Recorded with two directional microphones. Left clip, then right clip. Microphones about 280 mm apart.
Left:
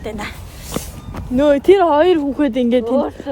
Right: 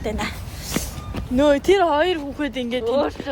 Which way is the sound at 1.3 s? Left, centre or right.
Centre.